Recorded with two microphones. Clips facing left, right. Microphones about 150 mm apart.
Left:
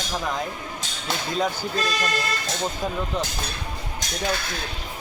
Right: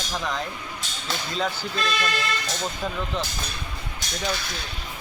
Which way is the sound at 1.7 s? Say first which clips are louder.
Left 1 dB; 40° left (ahead or behind).